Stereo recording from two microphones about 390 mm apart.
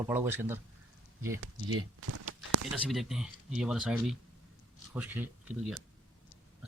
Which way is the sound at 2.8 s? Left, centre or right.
Centre.